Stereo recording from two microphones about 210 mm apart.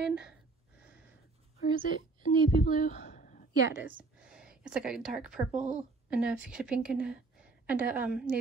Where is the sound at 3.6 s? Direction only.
10° right (ahead or behind).